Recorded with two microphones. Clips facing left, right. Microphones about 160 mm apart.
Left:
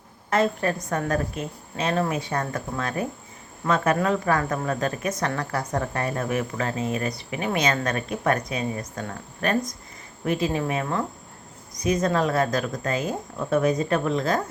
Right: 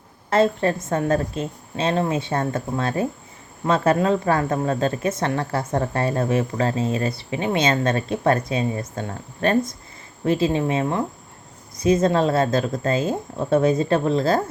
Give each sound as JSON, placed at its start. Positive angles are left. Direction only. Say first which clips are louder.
{"t": 0.3, "sound": "speech", "louder": "right 4 dB", "side_deg": -30}